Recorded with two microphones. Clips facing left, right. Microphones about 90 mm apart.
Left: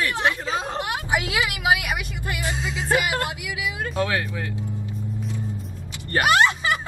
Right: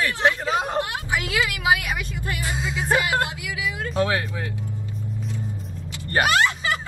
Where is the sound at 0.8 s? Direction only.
20° left (ahead or behind).